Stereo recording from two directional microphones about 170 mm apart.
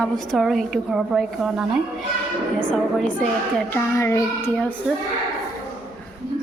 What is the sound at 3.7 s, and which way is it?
A child's voice, 15° left (ahead or behind).